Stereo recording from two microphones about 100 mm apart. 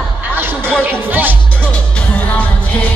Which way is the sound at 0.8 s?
20° right (ahead or behind).